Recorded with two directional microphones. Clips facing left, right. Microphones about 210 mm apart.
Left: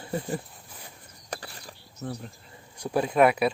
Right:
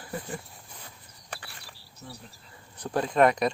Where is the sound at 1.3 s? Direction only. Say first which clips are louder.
Left 6 dB; 40° left (ahead or behind).